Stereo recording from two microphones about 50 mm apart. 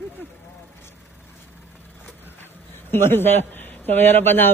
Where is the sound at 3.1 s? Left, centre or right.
Left.